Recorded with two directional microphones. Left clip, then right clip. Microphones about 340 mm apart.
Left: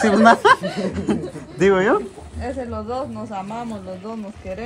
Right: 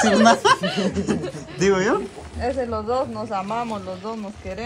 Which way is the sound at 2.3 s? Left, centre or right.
Right.